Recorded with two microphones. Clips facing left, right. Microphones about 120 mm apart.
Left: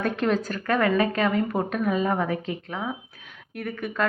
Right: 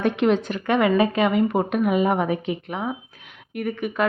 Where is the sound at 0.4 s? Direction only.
25° right (ahead or behind).